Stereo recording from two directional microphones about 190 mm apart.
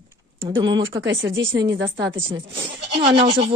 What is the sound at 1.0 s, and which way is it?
Speech, 70° right (ahead or behind).